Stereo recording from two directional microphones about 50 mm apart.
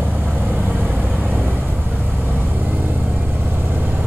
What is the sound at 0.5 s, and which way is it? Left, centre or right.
Vehicle, right.